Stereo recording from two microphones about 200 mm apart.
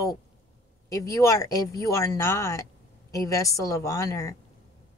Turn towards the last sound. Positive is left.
turn(degrees=15)  # may be behind; listen again after turning